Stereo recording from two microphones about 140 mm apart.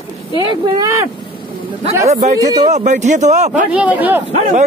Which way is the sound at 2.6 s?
55° right (ahead or behind).